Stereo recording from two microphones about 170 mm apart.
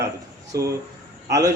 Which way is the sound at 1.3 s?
20° right (ahead or behind).